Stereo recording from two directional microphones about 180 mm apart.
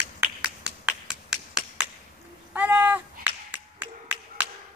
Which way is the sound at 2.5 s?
10° right (ahead or behind).